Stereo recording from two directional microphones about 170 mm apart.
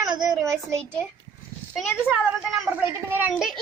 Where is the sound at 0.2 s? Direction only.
20° right (ahead or behind).